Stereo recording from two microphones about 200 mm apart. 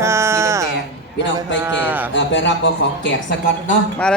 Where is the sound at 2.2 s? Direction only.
65° left (ahead or behind).